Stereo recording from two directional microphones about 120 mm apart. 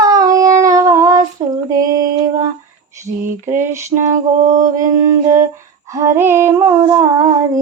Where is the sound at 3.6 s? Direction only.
20° right (ahead or behind).